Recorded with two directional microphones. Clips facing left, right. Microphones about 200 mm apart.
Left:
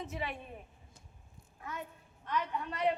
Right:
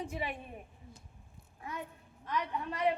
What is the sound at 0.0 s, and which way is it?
Speech, 10° right (ahead or behind).